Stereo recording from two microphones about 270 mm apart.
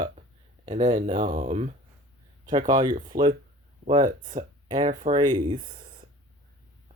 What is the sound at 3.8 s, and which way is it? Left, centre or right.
Speech, right.